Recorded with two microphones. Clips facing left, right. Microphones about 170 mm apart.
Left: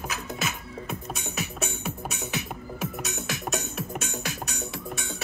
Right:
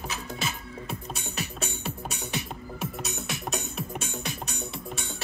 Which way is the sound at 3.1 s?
5° left (ahead or behind).